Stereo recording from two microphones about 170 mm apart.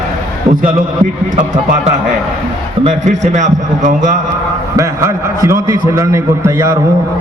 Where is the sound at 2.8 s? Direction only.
45° right (ahead or behind).